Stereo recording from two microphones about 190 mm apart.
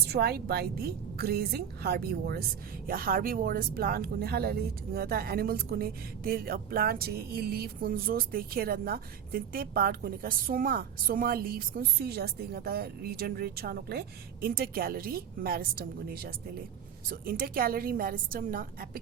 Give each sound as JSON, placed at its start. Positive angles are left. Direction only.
{"t": 0.1, "sound": "a woman's voice", "side_deg": -55}